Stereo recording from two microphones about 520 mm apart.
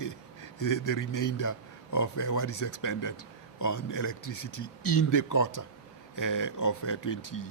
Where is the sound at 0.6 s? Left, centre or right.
Left.